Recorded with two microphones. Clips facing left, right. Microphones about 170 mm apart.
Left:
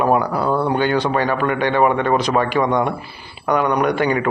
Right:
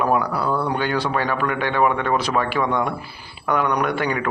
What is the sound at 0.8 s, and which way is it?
Speech, centre (ahead or behind).